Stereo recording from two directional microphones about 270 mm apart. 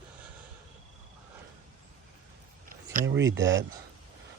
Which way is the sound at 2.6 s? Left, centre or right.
Right.